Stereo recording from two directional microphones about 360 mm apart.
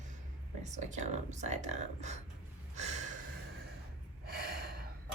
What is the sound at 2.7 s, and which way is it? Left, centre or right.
Gasp, centre.